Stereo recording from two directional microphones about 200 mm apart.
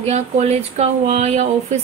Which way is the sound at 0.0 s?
35° right (ahead or behind).